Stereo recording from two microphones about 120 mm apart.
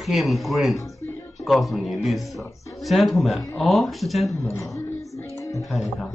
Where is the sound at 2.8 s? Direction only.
Centre (ahead or behind).